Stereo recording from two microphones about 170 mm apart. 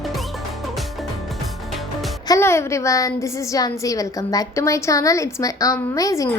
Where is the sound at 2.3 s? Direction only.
15° left (ahead or behind).